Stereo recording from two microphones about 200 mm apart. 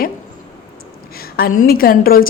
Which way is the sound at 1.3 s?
45° left (ahead or behind).